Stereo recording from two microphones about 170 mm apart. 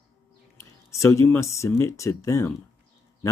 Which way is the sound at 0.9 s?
15° left (ahead or behind).